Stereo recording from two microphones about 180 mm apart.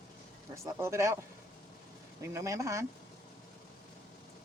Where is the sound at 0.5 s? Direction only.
15° right (ahead or behind).